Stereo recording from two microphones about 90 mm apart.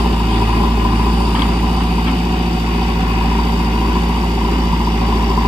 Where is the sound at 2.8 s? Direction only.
60° right (ahead or behind).